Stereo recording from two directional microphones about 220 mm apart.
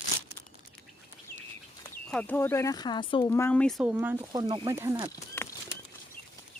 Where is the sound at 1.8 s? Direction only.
10° left (ahead or behind); by 5.1 s 15° right (ahead or behind).